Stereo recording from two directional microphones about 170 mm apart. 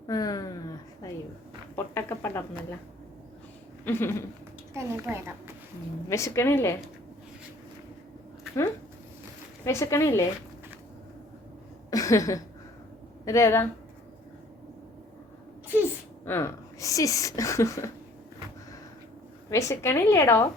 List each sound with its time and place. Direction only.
0.1 s a woman's voice: 20° left (ahead or behind)
3.8 s a woman's voice: 15° left (ahead or behind)
4.7 s a woman's voice: 15° right (ahead or behind)
6.1 s a woman's voice: 15° left (ahead or behind)
9.6 s a woman's voice: 15° left (ahead or behind)
11.9 s a woman's voice: 20° left (ahead or behind)
16.2 s speech: 15° left (ahead or behind)
19.5 s a woman's voice: 15° left (ahead or behind)